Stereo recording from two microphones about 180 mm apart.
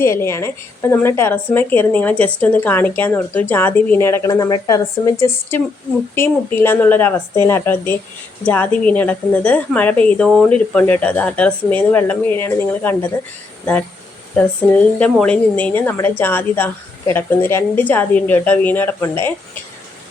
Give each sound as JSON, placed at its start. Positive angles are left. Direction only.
{"t": 0.0, "sound": "a woman's voice", "side_deg": 15}
{"t": 15.2, "sound": "a woman's voice", "side_deg": 5}